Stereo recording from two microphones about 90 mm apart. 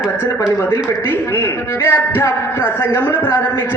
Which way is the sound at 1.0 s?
25° left (ahead or behind).